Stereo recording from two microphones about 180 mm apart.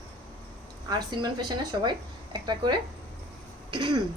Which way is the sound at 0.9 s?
20° right (ahead or behind).